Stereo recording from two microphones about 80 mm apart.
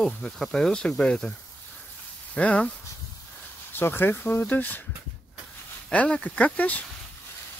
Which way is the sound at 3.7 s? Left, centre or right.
Left.